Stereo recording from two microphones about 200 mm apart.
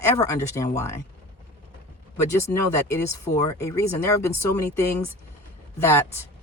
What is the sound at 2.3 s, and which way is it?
Speech, 15° left (ahead or behind).